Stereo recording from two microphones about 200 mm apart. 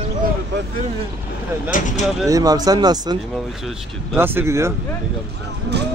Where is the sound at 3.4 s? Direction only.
Centre (ahead or behind).